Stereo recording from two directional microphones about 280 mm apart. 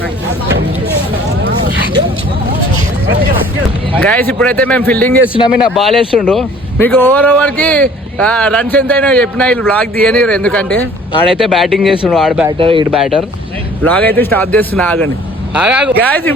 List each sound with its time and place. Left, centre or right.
4.1 s a man's voice: centre
12.5 s speech: centre
12.9 s a man's voice: centre